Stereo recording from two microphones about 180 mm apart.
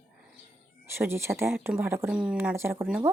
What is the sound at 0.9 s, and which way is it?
Speech, 15° right (ahead or behind).